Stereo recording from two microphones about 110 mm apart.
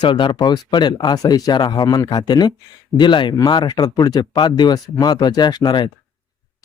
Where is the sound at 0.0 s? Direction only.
45° left (ahead or behind).